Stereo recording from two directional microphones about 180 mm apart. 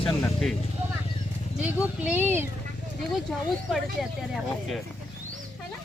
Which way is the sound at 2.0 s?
10° right (ahead or behind).